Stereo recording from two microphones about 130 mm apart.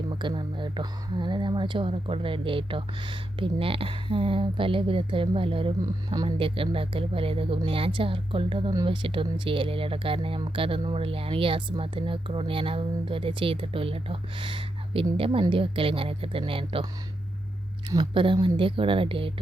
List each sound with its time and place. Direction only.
0.1 s speech: 35° right (ahead or behind)
5.8 s speech: 30° right (ahead or behind)
6.2 s speech: 45° right (ahead or behind)
17.8 s speech: 35° right (ahead or behind)